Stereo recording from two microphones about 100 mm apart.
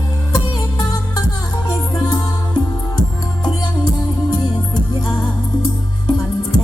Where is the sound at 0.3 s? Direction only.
45° left (ahead or behind).